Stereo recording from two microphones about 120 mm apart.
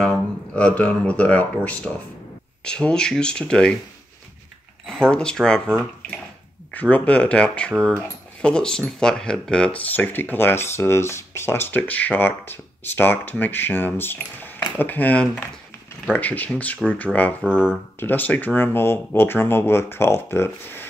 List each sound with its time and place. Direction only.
0.1 s speech: 10° left (ahead or behind)
4.8 s speech: 5° left (ahead or behind)
17.4 s speech: 10° right (ahead or behind)
17.9 s speech: 15° left (ahead or behind)